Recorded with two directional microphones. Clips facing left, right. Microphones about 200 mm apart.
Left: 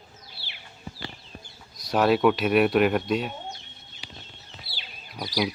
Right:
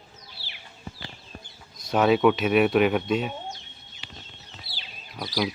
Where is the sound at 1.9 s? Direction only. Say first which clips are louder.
Right 1 dB; centre (ahead or behind).